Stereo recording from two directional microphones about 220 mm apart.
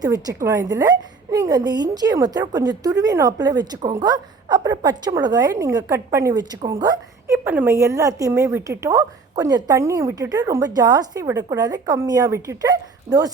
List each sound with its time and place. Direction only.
0.0 s a woman's voice: 15° right (ahead or behind)